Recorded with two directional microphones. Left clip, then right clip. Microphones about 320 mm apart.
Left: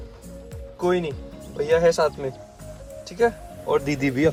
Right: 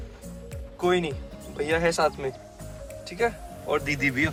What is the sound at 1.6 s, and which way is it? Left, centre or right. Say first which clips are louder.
Speech: left 5 dB; centre.